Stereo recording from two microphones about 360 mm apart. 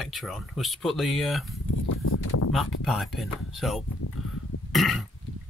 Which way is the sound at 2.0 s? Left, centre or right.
Left.